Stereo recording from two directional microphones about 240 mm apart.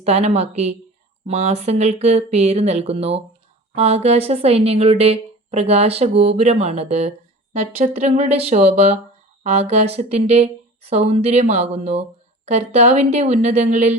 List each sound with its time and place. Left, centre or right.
0.0 s a woman's voice: right